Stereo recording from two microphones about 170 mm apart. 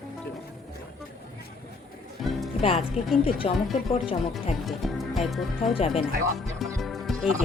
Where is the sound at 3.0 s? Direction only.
35° left (ahead or behind).